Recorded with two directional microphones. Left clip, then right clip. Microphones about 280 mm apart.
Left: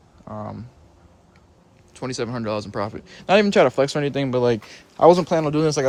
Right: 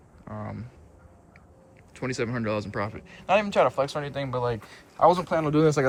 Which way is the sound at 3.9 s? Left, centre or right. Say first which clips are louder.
Left 8 dB; left.